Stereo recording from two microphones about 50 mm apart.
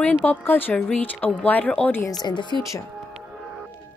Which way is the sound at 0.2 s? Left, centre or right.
Left.